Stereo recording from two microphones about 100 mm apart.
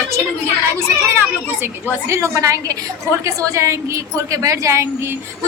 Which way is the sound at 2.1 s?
30° right (ahead or behind).